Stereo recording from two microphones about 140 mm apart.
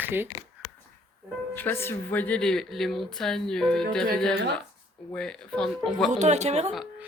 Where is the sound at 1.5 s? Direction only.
15° left (ahead or behind).